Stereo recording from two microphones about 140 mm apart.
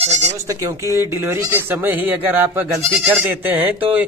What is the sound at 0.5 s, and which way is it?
Speech, 25° right (ahead or behind).